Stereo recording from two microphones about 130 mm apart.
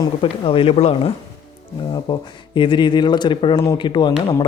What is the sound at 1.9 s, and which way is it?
A man's voice, 40° left (ahead or behind).